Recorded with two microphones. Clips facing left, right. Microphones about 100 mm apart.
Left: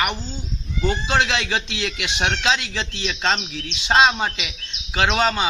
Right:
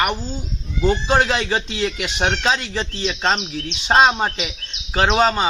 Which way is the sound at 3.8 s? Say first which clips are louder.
Right 2 dB; 15° right (ahead or behind).